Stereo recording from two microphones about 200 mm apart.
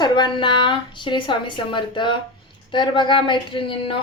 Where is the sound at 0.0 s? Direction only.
20° left (ahead or behind).